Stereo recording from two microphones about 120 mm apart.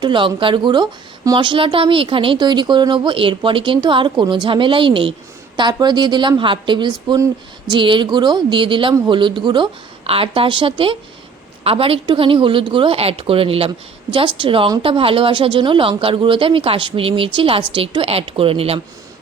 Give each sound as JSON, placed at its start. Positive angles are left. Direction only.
{"t": 0.0, "sound": "a woman's voice", "side_deg": -40}
{"t": 10.0, "sound": "speech", "side_deg": -50}